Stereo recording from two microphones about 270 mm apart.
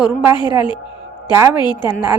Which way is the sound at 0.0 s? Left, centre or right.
Centre.